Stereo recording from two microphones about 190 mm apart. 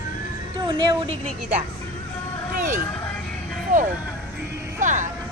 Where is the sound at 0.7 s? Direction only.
25° right (ahead or behind).